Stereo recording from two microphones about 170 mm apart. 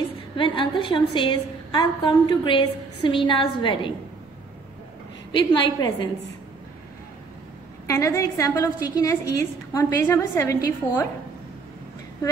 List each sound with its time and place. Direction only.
0.4 s a woman's voice: 30° left (ahead or behind)
5.3 s a woman's voice: 25° left (ahead or behind)
7.8 s a woman's voice: 20° left (ahead or behind)